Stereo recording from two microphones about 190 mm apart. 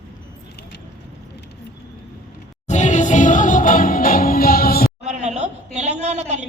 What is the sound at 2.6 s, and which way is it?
Music, 40° left (ahead or behind).